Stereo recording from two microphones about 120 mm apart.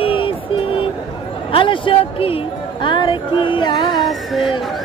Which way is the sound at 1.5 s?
45° left (ahead or behind).